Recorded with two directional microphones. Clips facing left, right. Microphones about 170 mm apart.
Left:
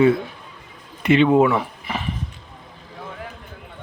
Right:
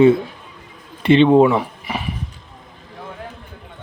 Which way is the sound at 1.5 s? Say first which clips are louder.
Right 3 dB; 15° right (ahead or behind).